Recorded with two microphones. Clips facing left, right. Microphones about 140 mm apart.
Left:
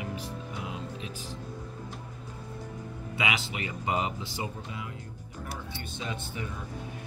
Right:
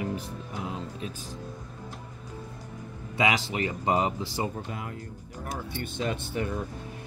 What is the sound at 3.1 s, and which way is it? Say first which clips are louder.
Speech: right 6 dB; 40° right (ahead or behind).